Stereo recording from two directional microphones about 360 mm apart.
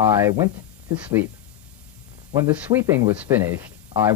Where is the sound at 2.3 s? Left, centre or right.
Centre.